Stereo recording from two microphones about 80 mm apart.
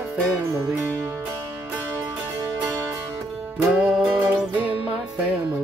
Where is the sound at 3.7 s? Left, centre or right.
Centre.